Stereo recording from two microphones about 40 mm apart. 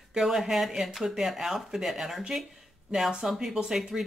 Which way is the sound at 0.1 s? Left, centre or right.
Centre.